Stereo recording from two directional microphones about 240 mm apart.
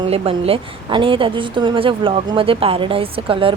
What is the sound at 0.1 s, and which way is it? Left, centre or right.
A woman's voice, right.